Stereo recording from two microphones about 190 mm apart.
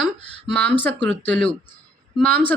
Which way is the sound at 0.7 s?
10° left (ahead or behind).